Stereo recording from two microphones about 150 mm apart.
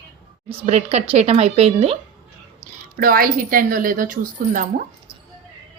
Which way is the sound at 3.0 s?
70° right (ahead or behind).